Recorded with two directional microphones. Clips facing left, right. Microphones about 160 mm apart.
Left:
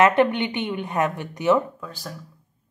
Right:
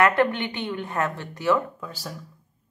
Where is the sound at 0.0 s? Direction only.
20° left (ahead or behind).